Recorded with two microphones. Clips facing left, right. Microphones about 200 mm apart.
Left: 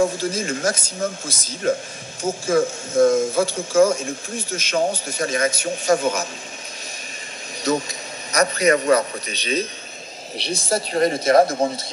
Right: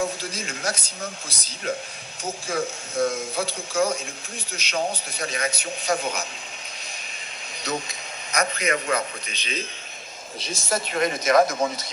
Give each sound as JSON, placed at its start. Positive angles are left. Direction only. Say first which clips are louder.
{"t": 0.0, "sound": "speech", "louder": "left 8 dB", "side_deg": 45}
{"t": 8.3, "sound": "a woman's voice", "louder": "left 7 dB", "side_deg": 40}
{"t": 10.3, "sound": "a woman's voice", "louder": "left 7 dB", "side_deg": 70}
{"t": 10.7, "sound": "a woman's voice", "louder": "left 5 dB", "side_deg": 35}